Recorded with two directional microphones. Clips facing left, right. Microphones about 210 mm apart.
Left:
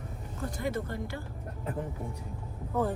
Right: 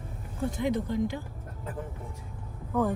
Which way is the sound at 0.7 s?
15° right (ahead or behind).